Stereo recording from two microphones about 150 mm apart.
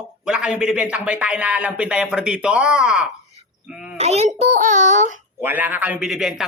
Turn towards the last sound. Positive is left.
turn(degrees=-5)  # may be behind; listen again after turning